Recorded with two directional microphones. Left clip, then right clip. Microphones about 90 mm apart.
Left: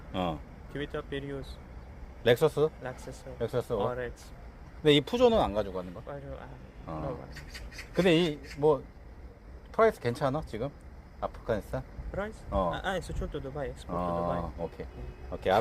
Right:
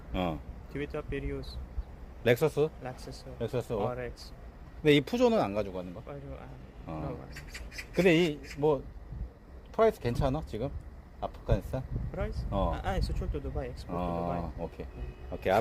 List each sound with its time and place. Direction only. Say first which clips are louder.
0.1 s speech: left 1 dB; 45° right (ahead or behind)
0.7 s speech: even; 25° right (ahead or behind)
2.2 s speech: left 2 dB; 45° right (ahead or behind)
3.0 s speech: left 2 dB; 25° right (ahead or behind)
3.4 s speech: left 2 dB; 35° right (ahead or behind)
4.8 s speech: left 2 dB; 40° right (ahead or behind)
5.7 s speech: left 2 dB; 25° right (ahead or behind)
8.0 s a man's voice: even; 45° right (ahead or behind)
8.3 s speech: left 2 dB; 35° right (ahead or behind)
12.1 s speech: left 3 dB; 20° right (ahead or behind)
14.1 s speech: left 4 dB; 5° right (ahead or behind)